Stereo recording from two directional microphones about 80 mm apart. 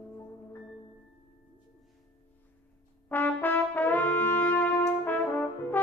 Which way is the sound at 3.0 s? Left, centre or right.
Left.